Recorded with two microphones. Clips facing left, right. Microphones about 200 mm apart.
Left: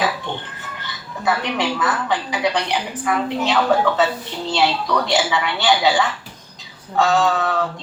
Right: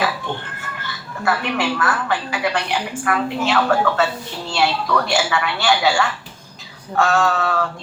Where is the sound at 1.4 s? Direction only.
20° left (ahead or behind).